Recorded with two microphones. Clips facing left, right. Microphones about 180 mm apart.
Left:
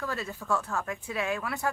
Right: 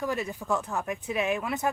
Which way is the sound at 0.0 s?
15° right (ahead or behind).